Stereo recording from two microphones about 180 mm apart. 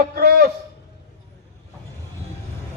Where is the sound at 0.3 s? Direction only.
55° right (ahead or behind).